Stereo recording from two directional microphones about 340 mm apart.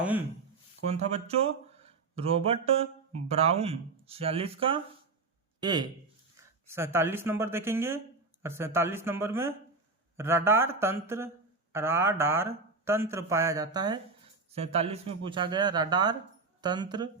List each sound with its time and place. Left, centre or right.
0.9 s speech: centre